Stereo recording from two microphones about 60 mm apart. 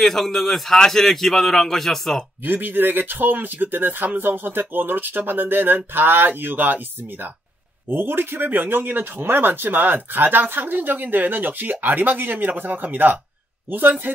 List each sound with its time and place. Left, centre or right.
0.0 s a man's voice: centre
2.4 s speech: right
7.9 s speech: right